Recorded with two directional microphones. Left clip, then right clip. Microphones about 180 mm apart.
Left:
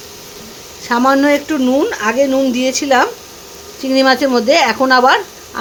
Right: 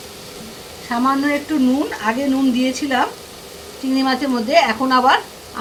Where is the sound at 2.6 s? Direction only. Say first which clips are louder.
Left 6 dB; 70° left (ahead or behind).